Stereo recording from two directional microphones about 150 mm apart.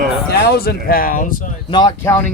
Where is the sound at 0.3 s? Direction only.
90° left.